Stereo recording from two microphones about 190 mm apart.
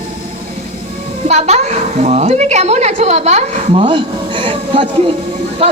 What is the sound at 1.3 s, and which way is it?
A woman's voice, 35° right (ahead or behind).